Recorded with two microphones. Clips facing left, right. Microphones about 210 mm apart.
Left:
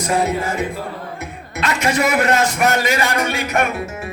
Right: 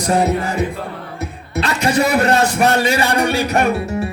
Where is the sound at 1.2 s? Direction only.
35° right (ahead or behind).